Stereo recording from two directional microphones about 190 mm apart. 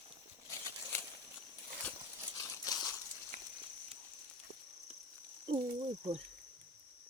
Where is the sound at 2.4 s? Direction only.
15° left (ahead or behind).